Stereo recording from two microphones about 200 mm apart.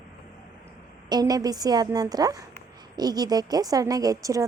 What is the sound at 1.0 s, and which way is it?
A woman's voice, 20° right (ahead or behind).